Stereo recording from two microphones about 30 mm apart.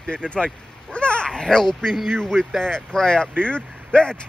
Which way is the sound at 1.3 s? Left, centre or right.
Left.